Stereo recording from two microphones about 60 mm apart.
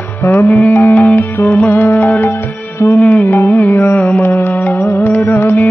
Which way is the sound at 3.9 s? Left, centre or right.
Left.